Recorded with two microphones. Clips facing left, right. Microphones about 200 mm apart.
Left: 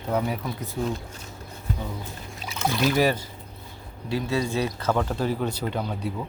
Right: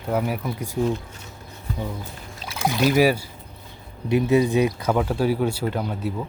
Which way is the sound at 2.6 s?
10° right (ahead or behind).